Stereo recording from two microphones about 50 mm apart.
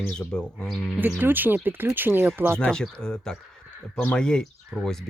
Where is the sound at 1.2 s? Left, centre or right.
Right.